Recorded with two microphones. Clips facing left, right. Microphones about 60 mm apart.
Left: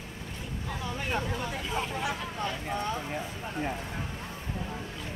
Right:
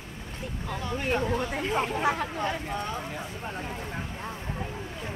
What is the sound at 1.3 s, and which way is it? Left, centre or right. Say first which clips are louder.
Speech: right 5 dB; right.